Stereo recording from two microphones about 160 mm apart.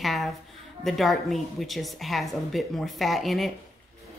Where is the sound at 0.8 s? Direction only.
Centre (ahead or behind).